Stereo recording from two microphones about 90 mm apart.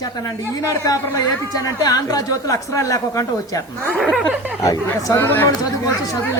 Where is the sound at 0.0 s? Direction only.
45° left (ahead or behind).